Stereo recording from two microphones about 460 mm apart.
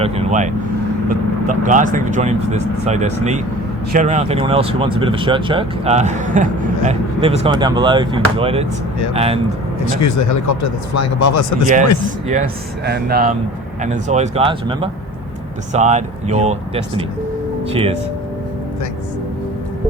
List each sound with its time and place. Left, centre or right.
0.0 s speech: centre
9.8 s speech: left
12.8 s speech: right